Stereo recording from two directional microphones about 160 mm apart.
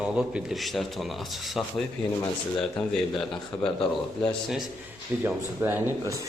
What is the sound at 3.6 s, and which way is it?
Speech, 35° left (ahead or behind).